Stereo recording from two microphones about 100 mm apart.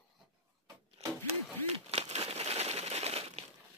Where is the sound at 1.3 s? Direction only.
90° right.